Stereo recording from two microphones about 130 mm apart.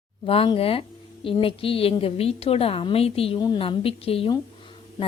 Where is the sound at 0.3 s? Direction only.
45° left (ahead or behind).